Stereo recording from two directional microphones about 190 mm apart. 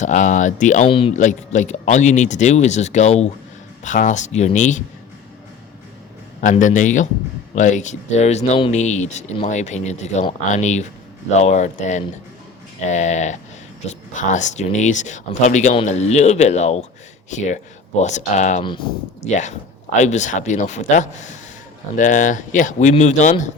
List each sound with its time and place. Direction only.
0.0 s speech: 40° left (ahead or behind)
0.9 s speech: 30° left (ahead or behind)
1.2 s speech: 40° left (ahead or behind)
6.4 s speech: 40° left (ahead or behind)
18.6 s speech: 25° left (ahead or behind)
19.2 s speech: 40° left (ahead or behind)